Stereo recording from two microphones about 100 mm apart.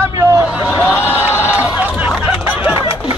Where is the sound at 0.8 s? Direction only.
20° left (ahead or behind).